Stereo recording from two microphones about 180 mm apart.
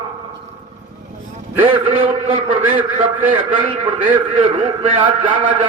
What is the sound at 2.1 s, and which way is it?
Speech, 30° right (ahead or behind).